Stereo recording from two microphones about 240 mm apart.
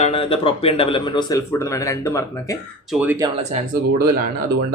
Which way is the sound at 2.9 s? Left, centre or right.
Centre.